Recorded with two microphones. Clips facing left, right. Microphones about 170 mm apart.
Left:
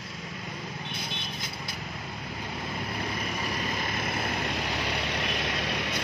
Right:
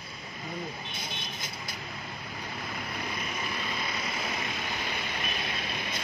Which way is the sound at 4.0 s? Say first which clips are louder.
Left 4 dB; 55° left (ahead or behind).